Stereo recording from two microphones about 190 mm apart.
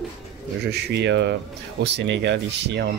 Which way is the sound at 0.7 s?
65° right (ahead or behind).